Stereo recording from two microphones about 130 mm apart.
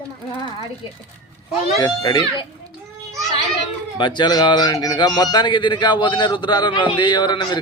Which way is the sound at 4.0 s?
35° left (ahead or behind).